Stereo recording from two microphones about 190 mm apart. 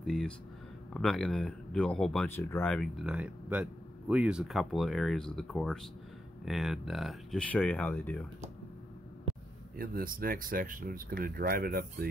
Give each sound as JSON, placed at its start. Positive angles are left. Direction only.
{"t": 0.0, "sound": "speech", "side_deg": 0}
{"t": 9.8, "sound": "speech", "side_deg": -50}